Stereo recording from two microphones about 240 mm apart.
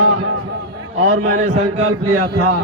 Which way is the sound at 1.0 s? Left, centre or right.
Right.